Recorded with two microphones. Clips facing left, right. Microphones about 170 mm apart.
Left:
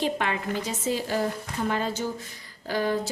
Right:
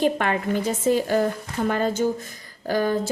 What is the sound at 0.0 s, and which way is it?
A woman's voice, 50° right (ahead or behind).